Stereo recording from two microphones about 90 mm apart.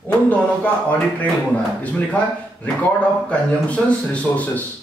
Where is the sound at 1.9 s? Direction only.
15° left (ahead or behind).